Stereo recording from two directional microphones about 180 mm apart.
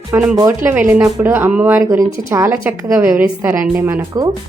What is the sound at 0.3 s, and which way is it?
Speech, 15° right (ahead or behind).